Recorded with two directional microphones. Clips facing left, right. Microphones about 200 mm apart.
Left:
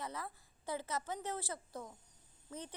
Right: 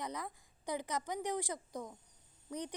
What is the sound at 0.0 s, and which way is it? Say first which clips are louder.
A woman's voice: right 2 dB; 15° right (ahead or behind).